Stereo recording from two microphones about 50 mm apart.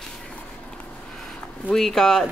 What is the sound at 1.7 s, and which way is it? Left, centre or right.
Speech, centre.